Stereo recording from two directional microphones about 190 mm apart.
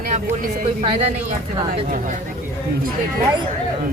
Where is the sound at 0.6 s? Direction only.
30° right (ahead or behind).